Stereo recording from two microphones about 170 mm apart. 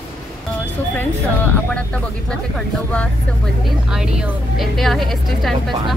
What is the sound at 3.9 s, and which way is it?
A woman's voice, 5° right (ahead or behind).